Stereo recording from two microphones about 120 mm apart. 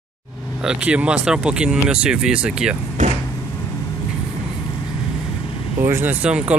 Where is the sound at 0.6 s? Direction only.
10° right (ahead or behind).